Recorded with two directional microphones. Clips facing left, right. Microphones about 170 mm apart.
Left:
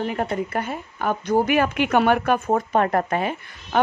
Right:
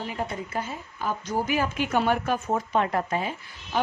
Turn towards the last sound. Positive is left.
turn(degrees=65)  # may be behind; listen again after turning